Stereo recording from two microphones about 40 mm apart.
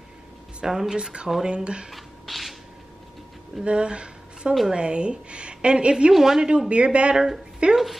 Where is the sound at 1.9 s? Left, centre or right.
Centre.